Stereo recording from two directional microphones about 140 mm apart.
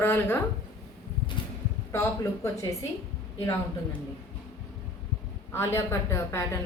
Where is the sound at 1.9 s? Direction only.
20° left (ahead or behind).